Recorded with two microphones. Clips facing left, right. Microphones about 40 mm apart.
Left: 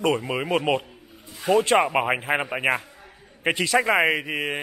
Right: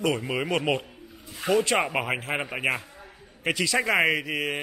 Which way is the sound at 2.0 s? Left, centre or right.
Centre.